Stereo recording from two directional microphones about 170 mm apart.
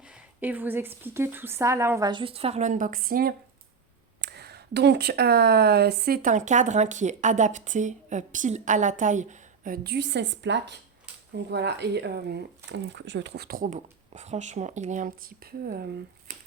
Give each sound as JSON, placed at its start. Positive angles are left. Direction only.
{"t": 0.1, "sound": "a woman's voice", "side_deg": -10}
{"t": 4.2, "sound": "speech", "side_deg": -75}